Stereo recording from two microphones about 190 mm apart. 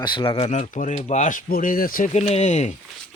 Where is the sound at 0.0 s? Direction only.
25° left (ahead or behind).